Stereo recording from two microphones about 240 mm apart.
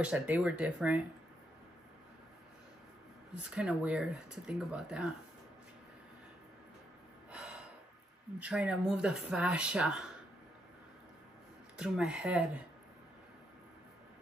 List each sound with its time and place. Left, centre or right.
0.0 s speech: centre
3.4 s speech: centre
7.2 s gasp: centre
8.4 s speech: centre
11.7 s speech: centre